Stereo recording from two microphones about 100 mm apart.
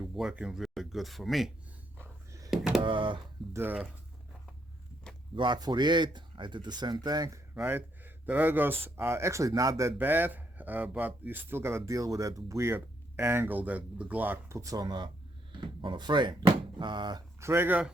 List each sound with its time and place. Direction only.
0.0 s a sound: centre (ahead or behind)
0.3 s speech: 5° right (ahead or behind)
2.5 s a sound: 5° right (ahead or behind)
2.8 s speech: 55° right (ahead or behind)
3.5 s speech: 20° right (ahead or behind)
5.3 s speech: 50° right (ahead or behind); by 7.4 s 35° right (ahead or behind)
7.5 s speech: 20° right (ahead or behind); by 9.9 s 35° right (ahead or behind)
10.0 s speech: 20° right (ahead or behind)
14.5 s speech: 35° right (ahead or behind)
17.4 s speech: 25° right (ahead or behind)